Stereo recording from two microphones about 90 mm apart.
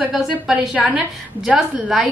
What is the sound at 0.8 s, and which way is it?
Speech, 20° right (ahead or behind).